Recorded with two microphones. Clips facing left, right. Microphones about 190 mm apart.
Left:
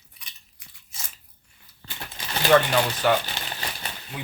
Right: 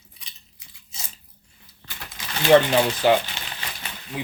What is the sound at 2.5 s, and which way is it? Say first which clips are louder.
Speech: right 4 dB; 20° right (ahead or behind).